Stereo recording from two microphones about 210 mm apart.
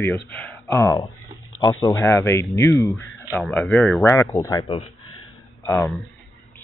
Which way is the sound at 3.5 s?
Centre (ahead or behind).